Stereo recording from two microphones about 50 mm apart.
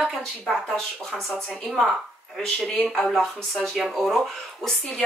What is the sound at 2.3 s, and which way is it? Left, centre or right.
Speech, centre.